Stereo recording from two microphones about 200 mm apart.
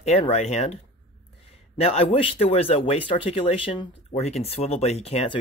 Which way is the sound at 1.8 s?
25° left (ahead or behind).